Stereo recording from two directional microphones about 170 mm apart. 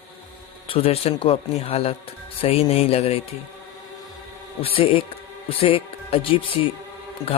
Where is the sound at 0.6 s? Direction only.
35° left (ahead or behind).